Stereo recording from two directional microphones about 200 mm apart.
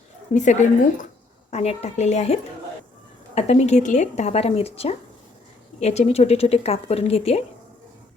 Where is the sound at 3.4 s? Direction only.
35° left (ahead or behind).